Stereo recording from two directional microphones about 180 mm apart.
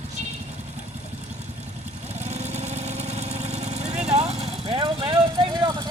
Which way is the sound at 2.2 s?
40° right (ahead or behind).